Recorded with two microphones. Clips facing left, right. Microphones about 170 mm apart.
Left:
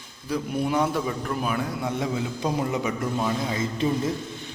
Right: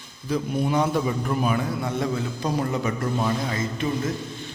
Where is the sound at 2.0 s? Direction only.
10° left (ahead or behind).